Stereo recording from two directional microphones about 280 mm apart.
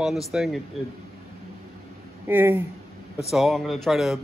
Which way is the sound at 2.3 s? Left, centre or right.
Centre.